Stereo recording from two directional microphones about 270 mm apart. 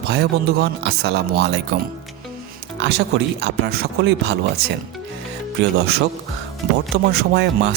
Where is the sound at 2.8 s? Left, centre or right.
Right.